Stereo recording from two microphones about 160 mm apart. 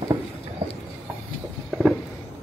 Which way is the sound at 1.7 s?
5° right (ahead or behind).